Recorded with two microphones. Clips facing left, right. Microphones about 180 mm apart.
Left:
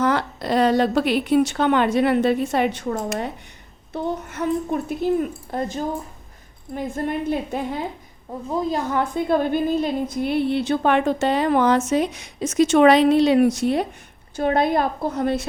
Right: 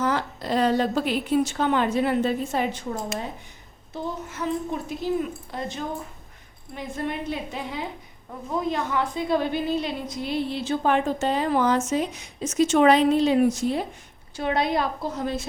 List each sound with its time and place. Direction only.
0.0 s a woman's voice: 70° left (ahead or behind)
14.3 s speech: 50° left (ahead or behind)